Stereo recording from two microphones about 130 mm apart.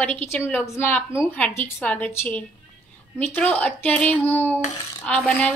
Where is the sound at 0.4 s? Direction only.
15° left (ahead or behind).